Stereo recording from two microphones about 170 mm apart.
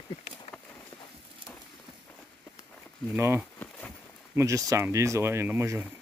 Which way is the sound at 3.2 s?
15° right (ahead or behind).